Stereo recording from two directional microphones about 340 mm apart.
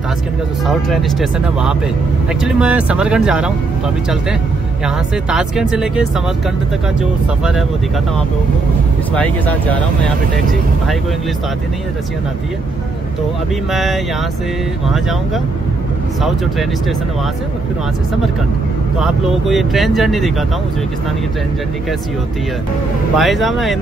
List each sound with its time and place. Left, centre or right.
0.7 s speech: centre
4.8 s speech: centre
9.1 s speech: centre
13.7 s speech: centre
18.9 s speech: centre
23.1 s speech: centre